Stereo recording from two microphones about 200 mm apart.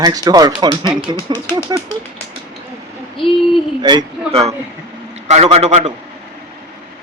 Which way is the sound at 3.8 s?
20° right (ahead or behind).